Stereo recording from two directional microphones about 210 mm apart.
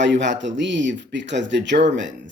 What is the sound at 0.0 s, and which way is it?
Speech, 60° right (ahead or behind).